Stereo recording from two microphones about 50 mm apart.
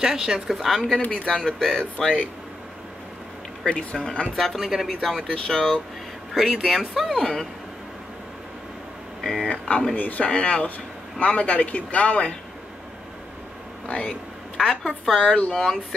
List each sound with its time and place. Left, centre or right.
0.0 s speech: centre
1.1 s speech: centre
3.6 s speech: centre
4.6 s speech: centre
6.3 s speech: centre
9.2 s speech: centre
9.5 s speech: left
13.8 s speech: left
14.7 s speech: centre
15.2 s speech: left
15.5 s speech: centre